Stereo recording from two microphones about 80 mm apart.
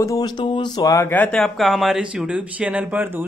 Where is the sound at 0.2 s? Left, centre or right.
Left.